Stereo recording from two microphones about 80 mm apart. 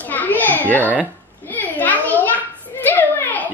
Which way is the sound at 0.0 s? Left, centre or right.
Left.